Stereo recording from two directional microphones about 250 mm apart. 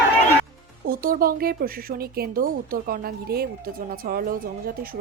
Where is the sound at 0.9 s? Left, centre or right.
Right.